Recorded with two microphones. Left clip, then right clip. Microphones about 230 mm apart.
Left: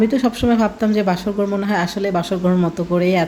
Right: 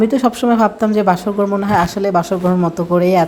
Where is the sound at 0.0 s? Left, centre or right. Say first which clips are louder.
Right 3 dB; centre.